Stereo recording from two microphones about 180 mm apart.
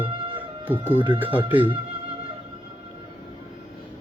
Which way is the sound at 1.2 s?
30° right (ahead or behind).